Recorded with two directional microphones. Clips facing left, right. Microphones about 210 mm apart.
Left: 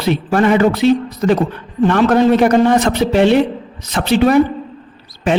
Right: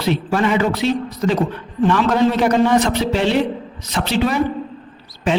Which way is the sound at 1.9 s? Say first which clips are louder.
Left 5 dB; 55° left (ahead or behind).